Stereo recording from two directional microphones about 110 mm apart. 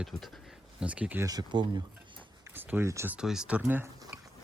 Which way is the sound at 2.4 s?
20° right (ahead or behind).